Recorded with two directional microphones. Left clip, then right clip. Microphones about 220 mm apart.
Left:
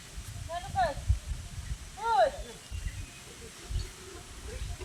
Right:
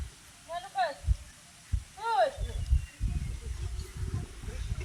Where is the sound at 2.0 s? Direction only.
35° right (ahead or behind).